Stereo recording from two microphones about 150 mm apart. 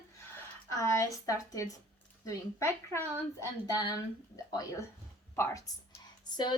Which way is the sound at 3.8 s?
25° left (ahead or behind).